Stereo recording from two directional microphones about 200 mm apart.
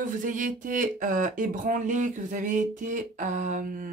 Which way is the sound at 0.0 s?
40° right (ahead or behind).